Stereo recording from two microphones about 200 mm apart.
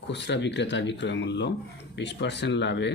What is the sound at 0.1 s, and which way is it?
Speech, 60° left (ahead or behind).